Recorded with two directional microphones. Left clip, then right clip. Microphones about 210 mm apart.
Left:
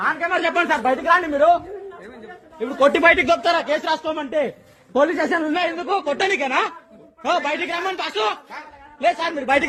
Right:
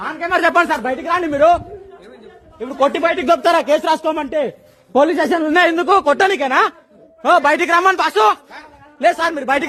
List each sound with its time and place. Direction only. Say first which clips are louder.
0.1 s a man's voice: right 5 dB; 50° right (ahead or behind)
1.3 s a man's voice: right 3 dB; 60° right (ahead or behind)
2.6 s a man's voice: even; 20° right (ahead or behind)
3.2 s a man's voice: right 5 dB; 40° right (ahead or behind); by 4.3 s 60° right (ahead or behind)
4.3 s speech: right 3 dB; 40° right (ahead or behind)
4.9 s a man's voice: right 4 dB; 55° right (ahead or behind)
6.1 s a man's voice: right 6 dB; 30° right (ahead or behind)